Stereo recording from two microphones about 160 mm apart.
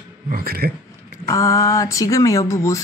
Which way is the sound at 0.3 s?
70° right (ahead or behind).